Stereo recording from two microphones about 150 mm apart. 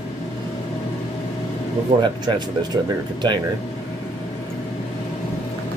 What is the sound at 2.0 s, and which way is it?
Speech, 30° right (ahead or behind).